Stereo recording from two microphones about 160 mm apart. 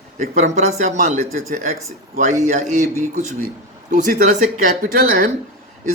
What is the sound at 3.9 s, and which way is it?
Speech, 50° right (ahead or behind).